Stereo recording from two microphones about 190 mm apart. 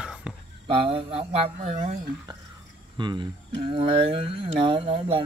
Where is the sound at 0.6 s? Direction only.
30° right (ahead or behind).